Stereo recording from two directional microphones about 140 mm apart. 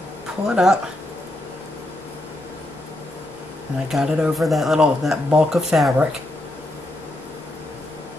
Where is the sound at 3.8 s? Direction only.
5° right (ahead or behind).